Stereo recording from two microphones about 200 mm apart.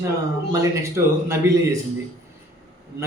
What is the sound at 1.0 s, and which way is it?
Speech, 15° right (ahead or behind).